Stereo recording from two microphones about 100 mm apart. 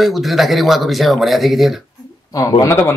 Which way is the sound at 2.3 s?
35° left (ahead or behind).